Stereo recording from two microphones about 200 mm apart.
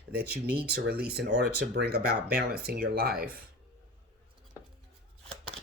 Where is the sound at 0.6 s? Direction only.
55° right (ahead or behind).